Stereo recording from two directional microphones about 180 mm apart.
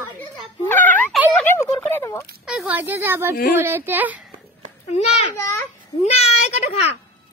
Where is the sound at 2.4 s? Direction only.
5° right (ahead or behind).